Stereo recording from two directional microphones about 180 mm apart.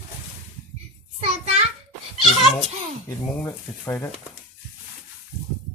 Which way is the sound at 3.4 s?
10° left (ahead or behind).